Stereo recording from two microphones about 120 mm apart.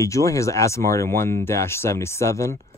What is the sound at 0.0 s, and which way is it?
Speech, 25° left (ahead or behind).